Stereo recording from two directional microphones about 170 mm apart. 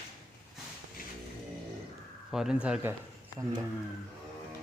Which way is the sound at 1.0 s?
60° left (ahead or behind).